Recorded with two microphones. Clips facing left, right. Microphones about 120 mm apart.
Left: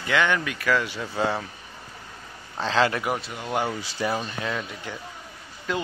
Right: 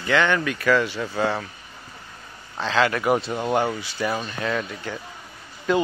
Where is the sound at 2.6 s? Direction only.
30° left (ahead or behind).